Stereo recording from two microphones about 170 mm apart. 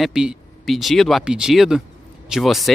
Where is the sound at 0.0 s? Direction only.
5° right (ahead or behind).